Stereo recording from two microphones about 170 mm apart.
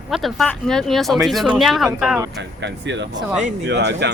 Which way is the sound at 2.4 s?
90° right.